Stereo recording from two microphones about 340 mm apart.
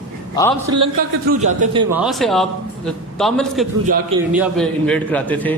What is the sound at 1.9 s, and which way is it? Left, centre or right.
A man's voice, centre.